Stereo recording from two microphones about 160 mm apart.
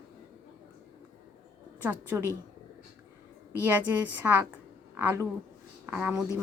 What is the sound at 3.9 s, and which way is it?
Speech, 10° right (ahead or behind).